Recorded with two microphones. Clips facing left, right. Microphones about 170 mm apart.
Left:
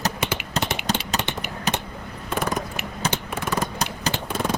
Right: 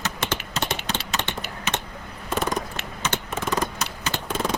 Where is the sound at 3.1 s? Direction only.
10° left (ahead or behind).